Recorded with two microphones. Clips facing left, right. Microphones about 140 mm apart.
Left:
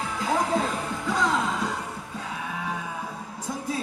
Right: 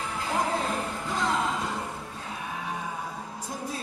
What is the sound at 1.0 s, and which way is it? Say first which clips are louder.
Music: left 6 dB; 90° left.